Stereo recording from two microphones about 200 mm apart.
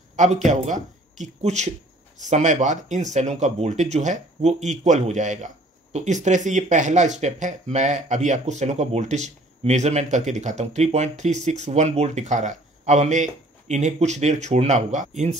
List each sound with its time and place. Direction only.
0.1 s speech: 35° right (ahead or behind)